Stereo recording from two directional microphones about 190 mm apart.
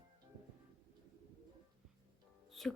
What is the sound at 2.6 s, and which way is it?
Music, centre (ahead or behind).